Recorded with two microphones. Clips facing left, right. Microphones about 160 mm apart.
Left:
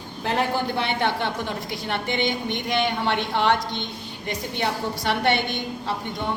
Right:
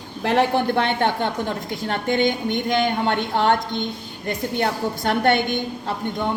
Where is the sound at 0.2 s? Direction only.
80° right.